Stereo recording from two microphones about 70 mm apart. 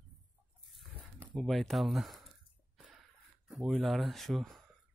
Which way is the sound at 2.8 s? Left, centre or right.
Centre.